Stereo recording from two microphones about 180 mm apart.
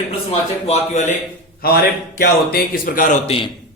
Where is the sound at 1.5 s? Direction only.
60° left (ahead or behind).